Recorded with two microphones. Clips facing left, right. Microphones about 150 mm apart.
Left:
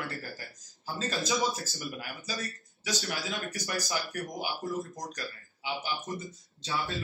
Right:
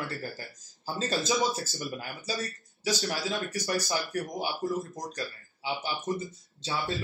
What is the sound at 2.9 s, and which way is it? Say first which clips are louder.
Speech: right 4 dB; 30° right (ahead or behind).